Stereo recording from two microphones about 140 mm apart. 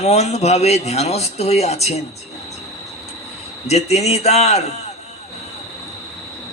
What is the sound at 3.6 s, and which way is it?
A man's voice, 50° left (ahead or behind).